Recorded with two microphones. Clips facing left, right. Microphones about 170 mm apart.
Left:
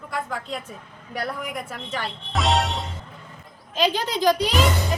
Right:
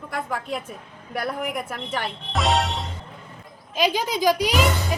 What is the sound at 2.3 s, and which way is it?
Speech, centre (ahead or behind).